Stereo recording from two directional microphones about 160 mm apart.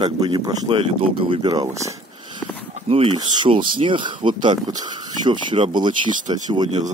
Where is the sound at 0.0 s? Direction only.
30° right (ahead or behind).